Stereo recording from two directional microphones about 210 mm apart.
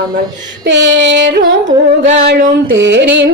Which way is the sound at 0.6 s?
55° right (ahead or behind).